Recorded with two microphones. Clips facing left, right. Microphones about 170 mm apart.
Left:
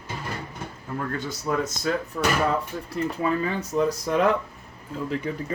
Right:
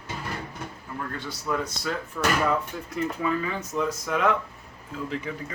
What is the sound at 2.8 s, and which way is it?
Speech, 35° left (ahead or behind).